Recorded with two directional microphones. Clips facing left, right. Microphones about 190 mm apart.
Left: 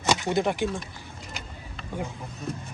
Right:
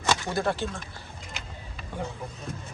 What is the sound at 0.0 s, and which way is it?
Speech, 15° left (ahead or behind).